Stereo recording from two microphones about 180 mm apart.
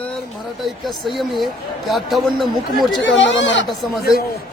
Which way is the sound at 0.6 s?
Centre (ahead or behind).